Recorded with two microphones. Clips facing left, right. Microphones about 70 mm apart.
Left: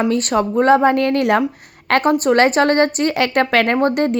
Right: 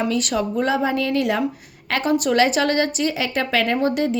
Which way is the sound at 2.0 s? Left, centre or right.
Left.